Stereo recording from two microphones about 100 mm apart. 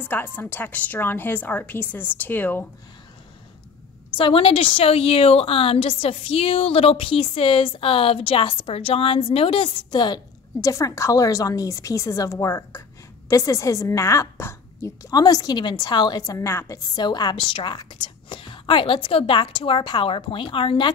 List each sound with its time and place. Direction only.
0.0 s a woman's voice: 20° left (ahead or behind)
4.2 s a woman's voice: 65° left (ahead or behind)
9.8 s a woman's voice: 45° left (ahead or behind)
10.6 s a woman's voice: 30° left (ahead or behind); by 20.9 s 55° left (ahead or behind)